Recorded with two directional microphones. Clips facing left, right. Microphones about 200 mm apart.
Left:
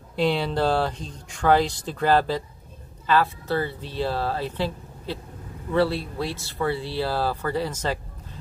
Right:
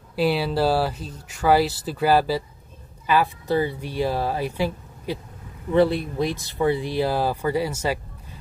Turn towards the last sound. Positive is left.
turn(degrees=-10)  # may be behind; listen again after turning